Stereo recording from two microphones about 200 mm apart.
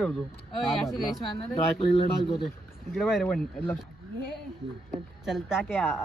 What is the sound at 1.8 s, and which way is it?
Speech, 25° left (ahead or behind).